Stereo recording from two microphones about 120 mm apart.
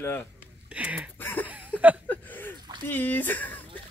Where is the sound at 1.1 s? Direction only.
15° left (ahead or behind).